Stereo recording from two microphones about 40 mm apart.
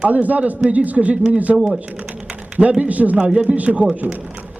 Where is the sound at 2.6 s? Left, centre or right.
Right.